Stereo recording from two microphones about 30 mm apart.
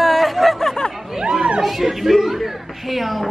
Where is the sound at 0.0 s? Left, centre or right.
Centre.